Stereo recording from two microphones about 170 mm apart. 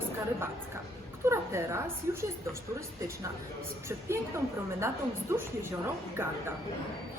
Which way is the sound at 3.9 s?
15° right (ahead or behind).